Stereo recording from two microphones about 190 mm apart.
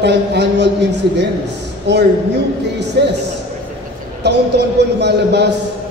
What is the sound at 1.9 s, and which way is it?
A man's voice, 65° right (ahead or behind).